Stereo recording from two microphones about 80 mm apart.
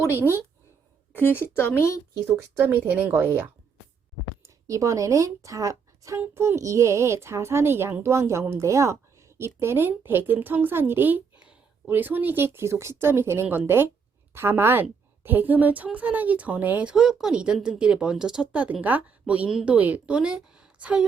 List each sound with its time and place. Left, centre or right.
1.1 s speech: left
2.2 s a woman's voice: right
4.4 s speech: right
6.1 s a child's voice: right
16.9 s speech: centre